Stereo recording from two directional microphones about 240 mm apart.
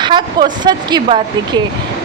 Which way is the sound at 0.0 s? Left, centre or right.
Centre.